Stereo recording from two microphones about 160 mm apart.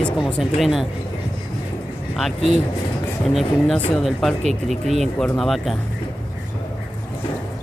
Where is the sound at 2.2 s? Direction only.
Centre (ahead or behind).